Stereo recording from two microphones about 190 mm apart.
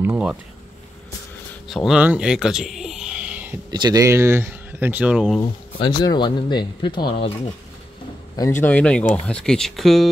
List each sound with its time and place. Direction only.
0.0 s speech: 10° right (ahead or behind)
1.9 s a sound: 5° right (ahead or behind)
3.7 s speech: 20° right (ahead or behind); by 5.4 s 5° right (ahead or behind)
5.4 s speech: 20° left (ahead or behind)
8.4 s a man's voice: 15° left (ahead or behind)